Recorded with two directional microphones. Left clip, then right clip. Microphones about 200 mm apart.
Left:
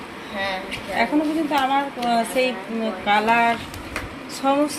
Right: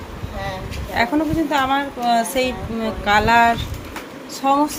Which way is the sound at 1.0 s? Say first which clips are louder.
Right 2 dB; 15° right (ahead or behind).